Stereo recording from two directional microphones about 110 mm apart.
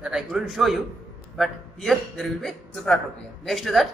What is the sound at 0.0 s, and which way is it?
A man's voice, 5° right (ahead or behind).